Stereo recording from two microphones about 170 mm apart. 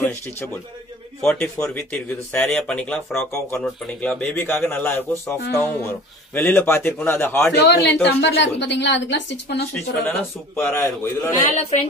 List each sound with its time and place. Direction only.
0.0 s speech: 15° left (ahead or behind)
7.5 s a woman's voice: 90° left
10.0 s speech: 15° left (ahead or behind)